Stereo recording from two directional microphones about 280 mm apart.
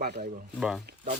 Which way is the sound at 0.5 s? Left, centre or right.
Centre.